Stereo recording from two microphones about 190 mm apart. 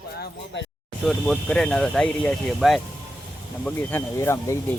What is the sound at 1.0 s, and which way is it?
Speech, centre (ahead or behind).